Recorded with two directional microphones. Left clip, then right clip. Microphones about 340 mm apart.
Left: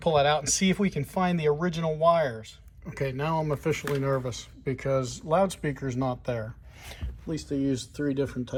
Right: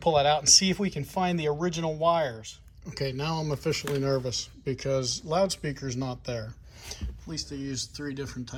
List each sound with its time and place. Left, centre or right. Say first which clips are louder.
0.0 s speech: even; centre